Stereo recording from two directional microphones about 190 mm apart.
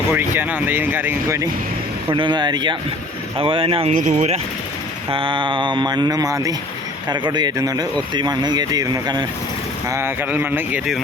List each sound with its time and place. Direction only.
0.1 s speech: 10° right (ahead or behind)
2.1 s speech: 25° right (ahead or behind)
5.1 s speech: 25° right (ahead or behind); by 11.0 s 5° right (ahead or behind)